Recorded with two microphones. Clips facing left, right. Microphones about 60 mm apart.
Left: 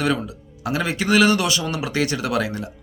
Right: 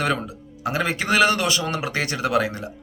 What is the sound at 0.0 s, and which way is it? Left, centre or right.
A man's voice, right.